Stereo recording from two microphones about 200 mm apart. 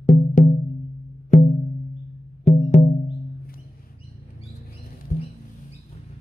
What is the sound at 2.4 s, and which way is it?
Music, 35° left (ahead or behind).